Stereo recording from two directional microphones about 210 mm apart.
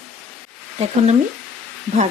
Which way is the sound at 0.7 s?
30° right (ahead or behind).